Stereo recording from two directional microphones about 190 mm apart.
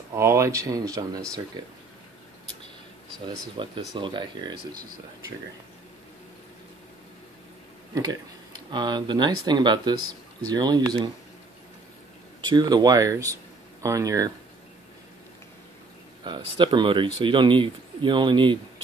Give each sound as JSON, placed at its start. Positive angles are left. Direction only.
{"t": 0.1, "sound": "speech", "side_deg": -15}
{"t": 3.6, "sound": "speech", "side_deg": -25}
{"t": 7.9, "sound": "speech", "side_deg": -20}
{"t": 12.4, "sound": "speech", "side_deg": -25}
{"t": 16.3, "sound": "speech", "side_deg": -25}